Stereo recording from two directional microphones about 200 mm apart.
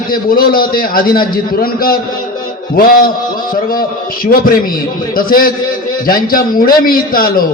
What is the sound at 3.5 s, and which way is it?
A man's voice, 45° left (ahead or behind).